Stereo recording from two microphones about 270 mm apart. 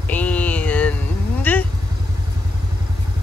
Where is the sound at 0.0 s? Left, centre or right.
Centre.